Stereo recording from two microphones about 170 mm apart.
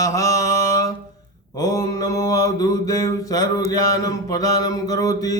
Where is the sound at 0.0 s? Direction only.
20° left (ahead or behind).